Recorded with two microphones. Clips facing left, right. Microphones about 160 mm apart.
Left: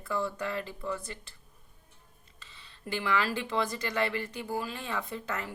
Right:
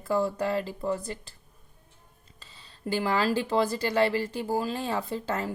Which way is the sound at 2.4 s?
35° right (ahead or behind).